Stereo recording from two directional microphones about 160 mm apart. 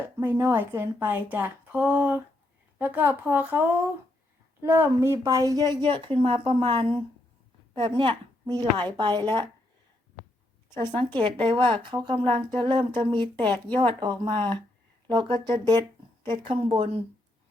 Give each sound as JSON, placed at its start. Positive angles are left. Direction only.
{"t": 0.2, "sound": "a woman's voice", "side_deg": -15}
{"t": 10.8, "sound": "a woman's voice", "side_deg": -30}